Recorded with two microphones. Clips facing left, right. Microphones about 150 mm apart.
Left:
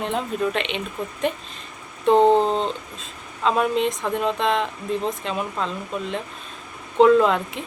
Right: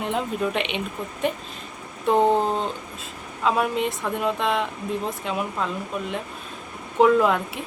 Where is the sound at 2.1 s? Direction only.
20° left (ahead or behind).